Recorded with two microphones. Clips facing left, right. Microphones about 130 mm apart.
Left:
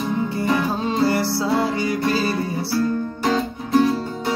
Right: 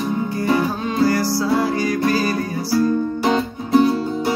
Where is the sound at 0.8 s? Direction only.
25° left (ahead or behind).